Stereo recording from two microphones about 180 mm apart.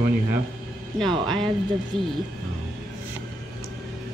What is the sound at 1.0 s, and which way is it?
Speech, centre (ahead or behind).